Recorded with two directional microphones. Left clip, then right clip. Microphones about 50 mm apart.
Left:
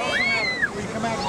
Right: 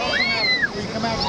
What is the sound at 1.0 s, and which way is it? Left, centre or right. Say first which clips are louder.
Vehicle: right 2 dB; centre.